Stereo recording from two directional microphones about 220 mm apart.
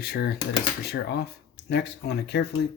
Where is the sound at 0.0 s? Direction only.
45° left (ahead or behind).